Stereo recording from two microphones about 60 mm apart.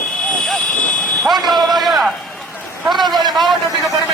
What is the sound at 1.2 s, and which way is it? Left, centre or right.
A man's voice, centre.